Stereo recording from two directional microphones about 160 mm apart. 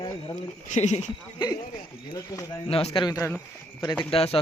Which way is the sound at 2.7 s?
35° left (ahead or behind).